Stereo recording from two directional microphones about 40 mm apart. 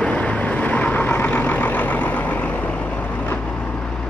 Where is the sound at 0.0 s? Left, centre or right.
Left.